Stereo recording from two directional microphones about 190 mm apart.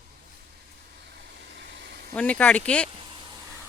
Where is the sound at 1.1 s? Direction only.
60° right (ahead or behind).